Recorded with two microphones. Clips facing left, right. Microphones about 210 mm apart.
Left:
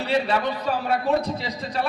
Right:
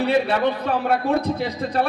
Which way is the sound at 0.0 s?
55° right (ahead or behind).